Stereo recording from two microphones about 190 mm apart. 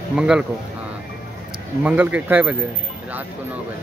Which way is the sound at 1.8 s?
10° right (ahead or behind).